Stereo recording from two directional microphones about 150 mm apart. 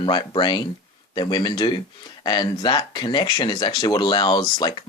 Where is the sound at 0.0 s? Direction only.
30° left (ahead or behind).